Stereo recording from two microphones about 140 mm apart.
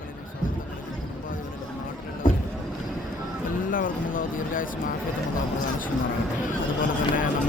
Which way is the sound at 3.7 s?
80° left.